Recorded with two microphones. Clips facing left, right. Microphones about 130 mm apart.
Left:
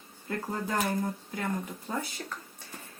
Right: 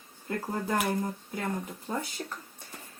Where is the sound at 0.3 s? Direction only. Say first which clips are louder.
Right 2 dB; 15° right (ahead or behind).